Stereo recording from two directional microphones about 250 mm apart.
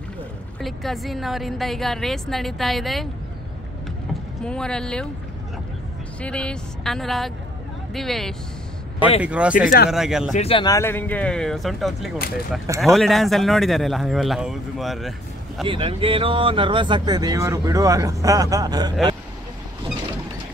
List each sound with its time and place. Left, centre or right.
0.6 s a man's voice: centre
4.1 s speech: centre
6.2 s a man's voice: centre
10.3 s a man's voice: left; by 15.6 s centre
15.6 s speech: right